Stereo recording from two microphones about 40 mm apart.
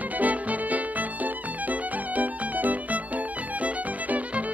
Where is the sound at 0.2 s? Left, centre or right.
Right.